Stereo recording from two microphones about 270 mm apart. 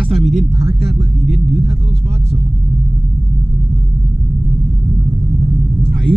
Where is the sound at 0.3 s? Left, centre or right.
Right.